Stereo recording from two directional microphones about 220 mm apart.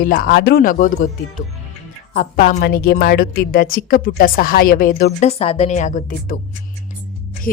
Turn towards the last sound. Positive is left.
turn(degrees=40)  # may be behind; listen again after turning